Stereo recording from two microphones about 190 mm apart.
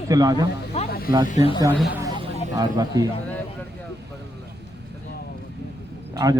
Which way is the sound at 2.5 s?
20° right (ahead or behind).